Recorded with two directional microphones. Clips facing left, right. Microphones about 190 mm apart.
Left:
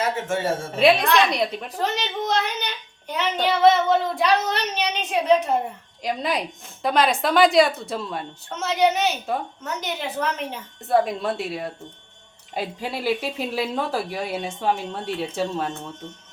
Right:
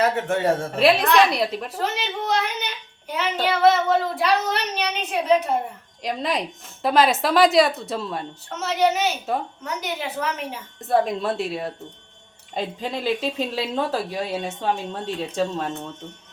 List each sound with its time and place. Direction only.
0.3 s speech: 60° right (ahead or behind)
0.8 s a woman's voice: centre (ahead or behind)
6.0 s a woman's voice: centre (ahead or behind)